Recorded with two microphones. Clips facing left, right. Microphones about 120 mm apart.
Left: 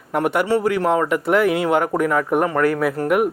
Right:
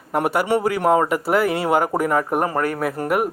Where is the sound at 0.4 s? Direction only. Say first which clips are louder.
Even; 15° right (ahead or behind).